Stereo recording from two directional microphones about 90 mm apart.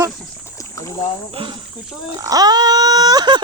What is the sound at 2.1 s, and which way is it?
Speech, 40° right (ahead or behind).